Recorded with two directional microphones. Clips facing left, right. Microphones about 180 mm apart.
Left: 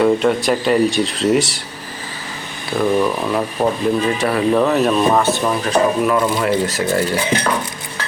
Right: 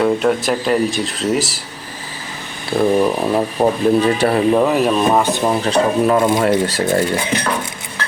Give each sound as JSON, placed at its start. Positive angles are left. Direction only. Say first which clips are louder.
{"t": 0.0, "sound": "speech", "louder": "left 1 dB", "side_deg": 0}
{"t": 2.7, "sound": "speech", "louder": "right 2 dB", "side_deg": -30}
{"t": 4.5, "sound": "speech", "louder": "even", "side_deg": -10}
{"t": 5.5, "sound": "speech", "louder": "right 1 dB", "side_deg": -30}